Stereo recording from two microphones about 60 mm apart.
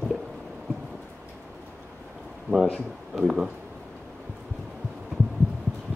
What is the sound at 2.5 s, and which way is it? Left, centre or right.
Speech, right.